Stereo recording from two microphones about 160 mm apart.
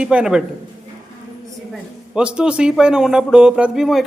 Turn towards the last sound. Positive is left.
turn(degrees=0)  # may be behind; listen again after turning